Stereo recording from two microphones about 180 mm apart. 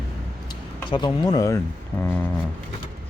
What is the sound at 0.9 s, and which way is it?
Speech, 25° left (ahead or behind).